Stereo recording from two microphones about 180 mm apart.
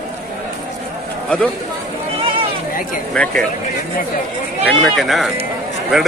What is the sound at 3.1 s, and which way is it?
Speech, 5° left (ahead or behind).